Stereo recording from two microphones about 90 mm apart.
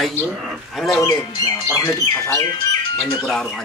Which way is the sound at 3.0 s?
5° left (ahead or behind).